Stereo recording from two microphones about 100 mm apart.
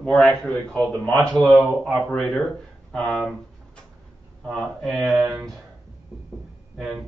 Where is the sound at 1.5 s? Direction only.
Centre (ahead or behind).